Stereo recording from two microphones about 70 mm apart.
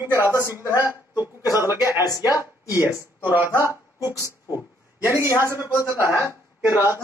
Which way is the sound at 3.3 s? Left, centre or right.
Right.